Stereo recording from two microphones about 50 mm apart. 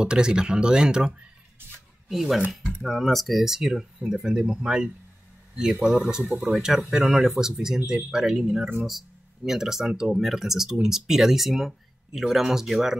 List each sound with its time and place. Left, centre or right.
0.0 s speech: centre
2.0 s speech: centre
6.4 s speech: centre